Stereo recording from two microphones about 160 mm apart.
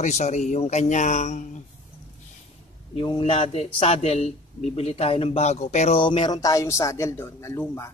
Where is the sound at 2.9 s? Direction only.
35° left (ahead or behind).